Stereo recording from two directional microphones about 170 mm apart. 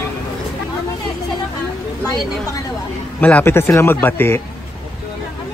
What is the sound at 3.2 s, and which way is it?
A man's voice, 10° left (ahead or behind).